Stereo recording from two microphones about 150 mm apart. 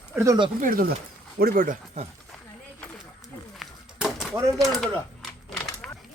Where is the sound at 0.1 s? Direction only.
5° right (ahead or behind).